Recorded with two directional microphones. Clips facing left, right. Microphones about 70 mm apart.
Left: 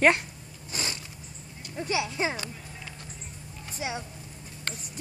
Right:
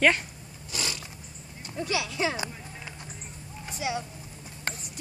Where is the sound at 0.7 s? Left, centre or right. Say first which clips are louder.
Even; left.